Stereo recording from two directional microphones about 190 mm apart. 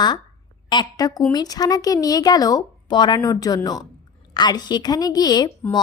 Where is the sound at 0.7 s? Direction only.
20° left (ahead or behind).